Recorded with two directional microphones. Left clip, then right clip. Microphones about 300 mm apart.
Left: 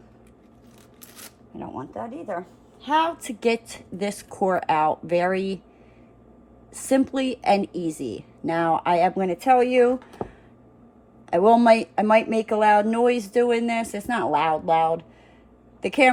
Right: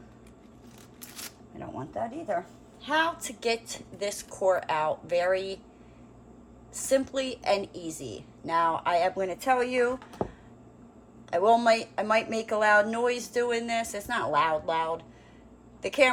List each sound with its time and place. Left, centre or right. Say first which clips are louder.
1.0 s shuffling cards: right 2 dB; centre
1.5 s speech: left 2 dB; left
6.7 s speech: left 4 dB; left
10.0 s a sound: even; centre
11.3 s a woman's voice: left 6 dB; left